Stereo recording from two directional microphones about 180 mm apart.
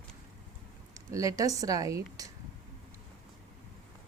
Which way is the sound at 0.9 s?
20° right (ahead or behind).